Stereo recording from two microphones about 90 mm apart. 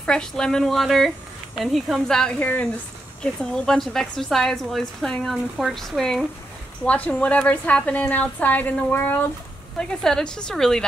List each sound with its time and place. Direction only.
0.0 s a woman's voice: 5° left (ahead or behind)
6.8 s a woman's voice: 15° left (ahead or behind)
9.8 s a woman's voice: 5° left (ahead or behind)